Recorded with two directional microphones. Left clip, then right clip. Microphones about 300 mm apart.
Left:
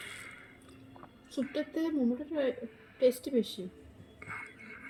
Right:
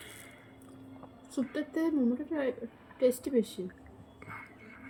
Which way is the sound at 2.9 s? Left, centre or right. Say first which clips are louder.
Even; centre.